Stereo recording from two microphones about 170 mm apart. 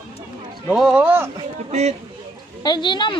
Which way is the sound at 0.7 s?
5° right (ahead or behind).